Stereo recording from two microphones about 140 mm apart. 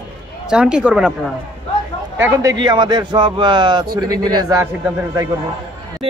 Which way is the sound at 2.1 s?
20° right (ahead or behind).